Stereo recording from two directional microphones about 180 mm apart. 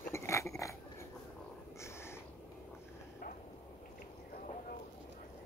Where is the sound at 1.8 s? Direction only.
15° left (ahead or behind).